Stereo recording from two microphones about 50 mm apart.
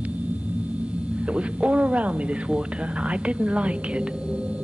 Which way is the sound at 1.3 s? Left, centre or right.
Right.